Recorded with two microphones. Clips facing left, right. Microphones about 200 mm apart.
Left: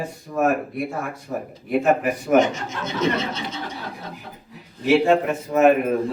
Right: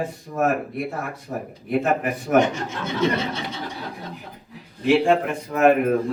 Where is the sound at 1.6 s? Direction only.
Centre (ahead or behind).